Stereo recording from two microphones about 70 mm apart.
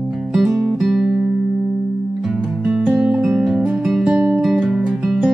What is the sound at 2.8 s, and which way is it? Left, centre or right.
Music, centre.